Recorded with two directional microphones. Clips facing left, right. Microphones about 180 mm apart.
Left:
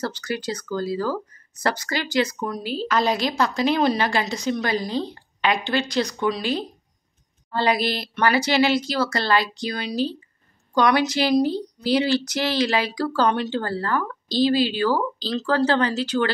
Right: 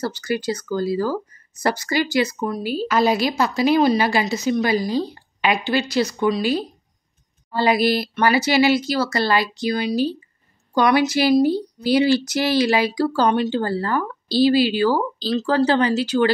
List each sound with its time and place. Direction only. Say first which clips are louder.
0.0 s speech: right 4 dB; 10° right (ahead or behind)